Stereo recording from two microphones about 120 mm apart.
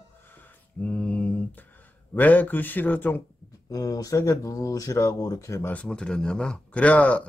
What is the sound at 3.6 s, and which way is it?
Speech, 30° left (ahead or behind).